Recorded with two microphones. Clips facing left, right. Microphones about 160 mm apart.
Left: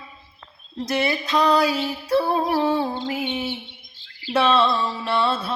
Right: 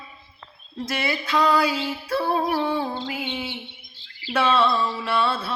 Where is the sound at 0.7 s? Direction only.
20° left (ahead or behind).